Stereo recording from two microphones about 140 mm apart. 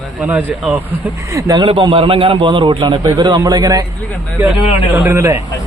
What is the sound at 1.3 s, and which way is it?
Speech, 25° right (ahead or behind).